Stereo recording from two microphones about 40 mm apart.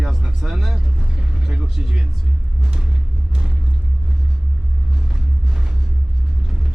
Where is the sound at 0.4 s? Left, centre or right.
Centre.